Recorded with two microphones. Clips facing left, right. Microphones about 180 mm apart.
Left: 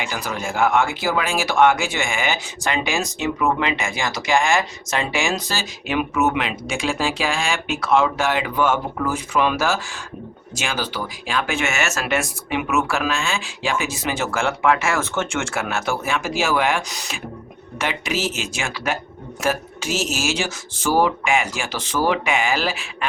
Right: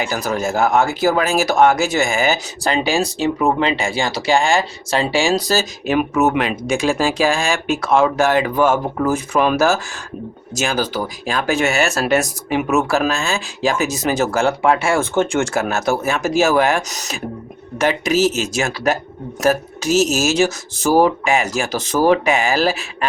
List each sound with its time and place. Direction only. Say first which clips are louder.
0.0 s speech: right 6 dB; 40° right (ahead or behind)